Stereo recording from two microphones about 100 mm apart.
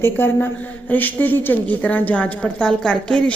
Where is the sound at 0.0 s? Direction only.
20° left (ahead or behind).